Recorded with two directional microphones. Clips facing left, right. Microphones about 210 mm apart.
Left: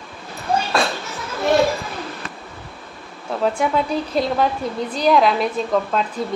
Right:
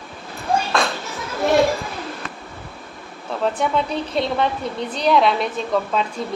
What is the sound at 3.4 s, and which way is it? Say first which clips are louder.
A woman's voice: left 1 dB; 5° left (ahead or behind).